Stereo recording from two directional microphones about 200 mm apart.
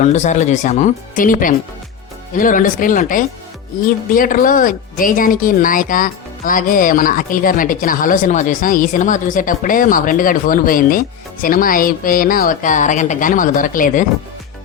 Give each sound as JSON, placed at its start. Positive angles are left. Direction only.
{"t": 0.0, "sound": "speech", "side_deg": 35}